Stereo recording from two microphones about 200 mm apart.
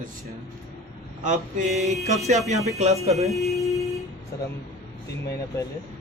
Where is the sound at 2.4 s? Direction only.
35° right (ahead or behind).